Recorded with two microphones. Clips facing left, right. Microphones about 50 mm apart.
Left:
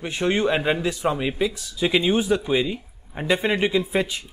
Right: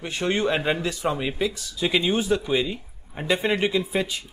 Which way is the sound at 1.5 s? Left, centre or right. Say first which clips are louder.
Left 3 dB; left.